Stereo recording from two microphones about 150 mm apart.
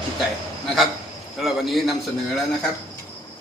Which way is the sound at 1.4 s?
Centre (ahead or behind).